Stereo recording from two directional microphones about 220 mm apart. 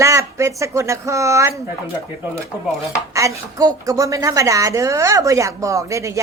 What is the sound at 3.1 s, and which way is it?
A woman's voice, 15° right (ahead or behind).